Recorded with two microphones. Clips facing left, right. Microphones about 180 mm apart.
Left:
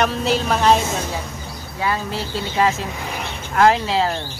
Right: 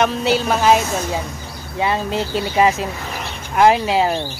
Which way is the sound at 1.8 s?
20° right (ahead or behind).